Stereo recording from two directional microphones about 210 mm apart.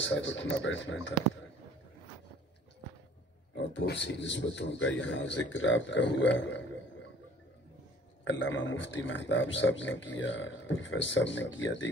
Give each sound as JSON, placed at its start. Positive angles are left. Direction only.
{"t": 0.0, "sound": "speech", "side_deg": 60}
{"t": 3.7, "sound": "speech", "side_deg": 60}
{"t": 8.2, "sound": "speech", "side_deg": 60}